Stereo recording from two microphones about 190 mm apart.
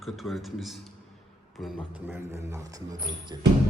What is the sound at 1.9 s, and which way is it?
Speech, 10° right (ahead or behind).